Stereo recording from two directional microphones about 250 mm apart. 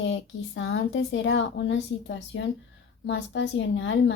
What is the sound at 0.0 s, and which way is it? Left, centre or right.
A child's voice, left.